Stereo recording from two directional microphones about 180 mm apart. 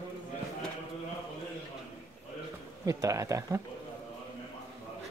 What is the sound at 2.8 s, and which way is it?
Speech, 20° right (ahead or behind).